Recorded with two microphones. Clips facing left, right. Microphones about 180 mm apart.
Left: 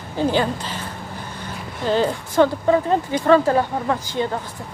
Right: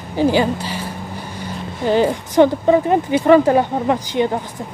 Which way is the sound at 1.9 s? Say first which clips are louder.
Right 4 dB; 15° right (ahead or behind).